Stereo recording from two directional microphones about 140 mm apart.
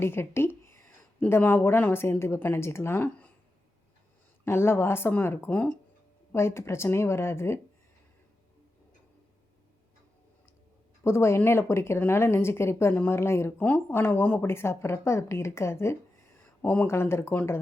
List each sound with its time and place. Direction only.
0.0 s speech: 15° left (ahead or behind)
4.4 s a woman's voice: 15° left (ahead or behind)
11.0 s speech: 20° left (ahead or behind)